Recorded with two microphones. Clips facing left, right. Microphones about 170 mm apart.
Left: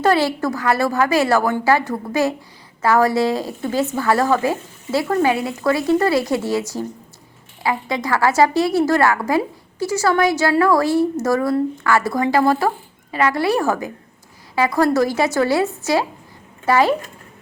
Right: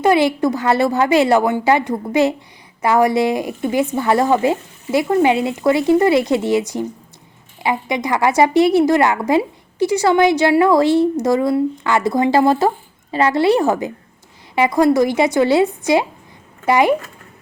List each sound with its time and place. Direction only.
0.0 s a woman's voice: 15° right (ahead or behind)